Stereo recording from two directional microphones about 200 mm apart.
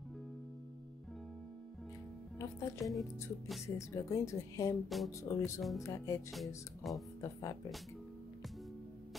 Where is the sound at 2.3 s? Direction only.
15° left (ahead or behind).